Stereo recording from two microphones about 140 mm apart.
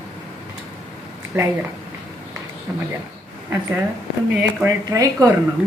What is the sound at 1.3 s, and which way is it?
Speech, 15° right (ahead or behind).